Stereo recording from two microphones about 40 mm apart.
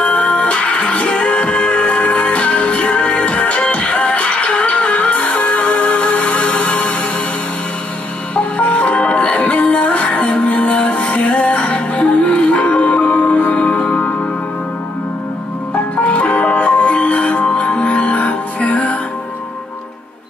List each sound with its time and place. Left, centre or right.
0.0 s music: left
8.4 s music: left
16.0 s music: left